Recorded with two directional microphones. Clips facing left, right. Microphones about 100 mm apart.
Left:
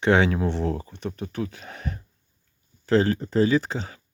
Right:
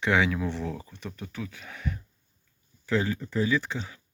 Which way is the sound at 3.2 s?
30° left (ahead or behind).